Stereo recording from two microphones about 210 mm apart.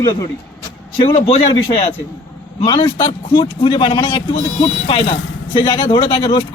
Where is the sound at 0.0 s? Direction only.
15° left (ahead or behind).